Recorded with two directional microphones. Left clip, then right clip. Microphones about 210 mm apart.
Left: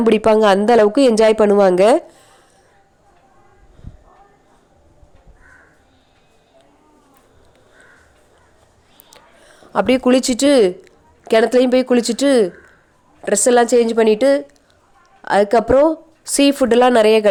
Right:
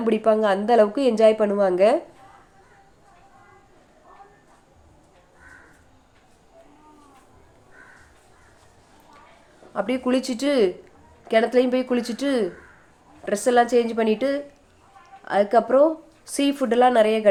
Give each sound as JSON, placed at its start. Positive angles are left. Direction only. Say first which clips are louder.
{"t": 0.0, "sound": "a woman's voice", "louder": "left 7 dB", "side_deg": 45}
{"t": 9.7, "sound": "a woman's voice", "louder": "left 9 dB", "side_deg": 45}